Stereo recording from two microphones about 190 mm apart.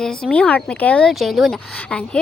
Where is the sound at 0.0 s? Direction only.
5° left (ahead or behind).